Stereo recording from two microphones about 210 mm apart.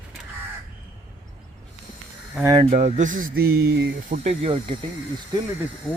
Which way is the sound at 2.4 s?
25° right (ahead or behind).